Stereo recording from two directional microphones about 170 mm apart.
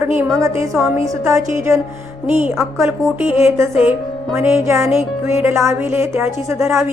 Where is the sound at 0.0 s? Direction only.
15° right (ahead or behind).